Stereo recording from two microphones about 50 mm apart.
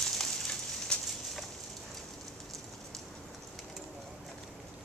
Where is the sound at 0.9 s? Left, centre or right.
Centre.